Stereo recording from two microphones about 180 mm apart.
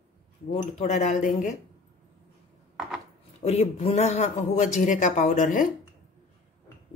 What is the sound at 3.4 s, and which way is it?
A man's voice, 35° left (ahead or behind).